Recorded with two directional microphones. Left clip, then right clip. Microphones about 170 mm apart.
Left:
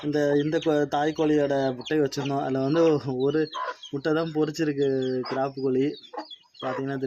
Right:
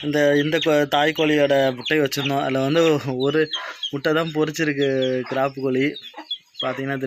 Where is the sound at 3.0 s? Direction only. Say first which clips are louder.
Right 4 dB; 30° right (ahead or behind).